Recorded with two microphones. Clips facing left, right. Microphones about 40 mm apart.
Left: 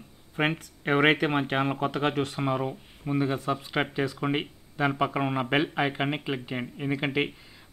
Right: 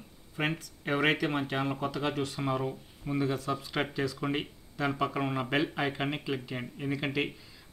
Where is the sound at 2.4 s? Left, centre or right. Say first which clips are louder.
Left 3 dB; left.